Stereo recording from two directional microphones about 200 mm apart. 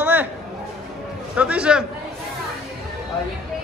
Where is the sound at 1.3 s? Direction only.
5° right (ahead or behind).